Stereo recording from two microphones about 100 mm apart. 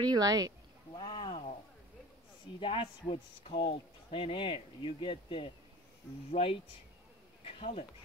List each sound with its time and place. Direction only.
0.0 s speech: 40° right (ahead or behind)
0.9 s a sound: 50° left (ahead or behind)
2.6 s speech: 55° left (ahead or behind); by 7.8 s 75° left (ahead or behind)